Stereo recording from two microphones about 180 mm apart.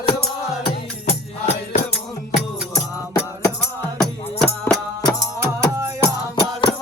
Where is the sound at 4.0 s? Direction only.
Centre (ahead or behind).